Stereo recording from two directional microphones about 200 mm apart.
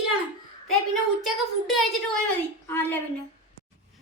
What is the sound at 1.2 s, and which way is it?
A woman's voice, centre (ahead or behind).